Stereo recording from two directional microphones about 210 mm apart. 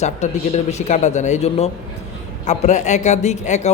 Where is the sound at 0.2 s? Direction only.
35° left (ahead or behind).